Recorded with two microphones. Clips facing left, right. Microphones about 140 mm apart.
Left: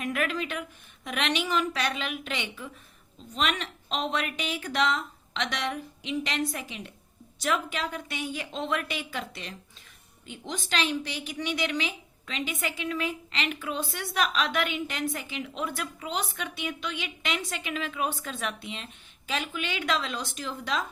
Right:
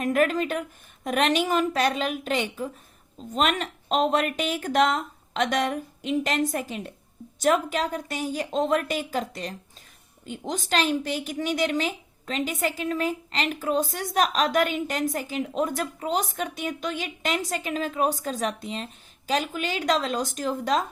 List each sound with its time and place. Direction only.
0.0 s a woman's voice: 45° right (ahead or behind)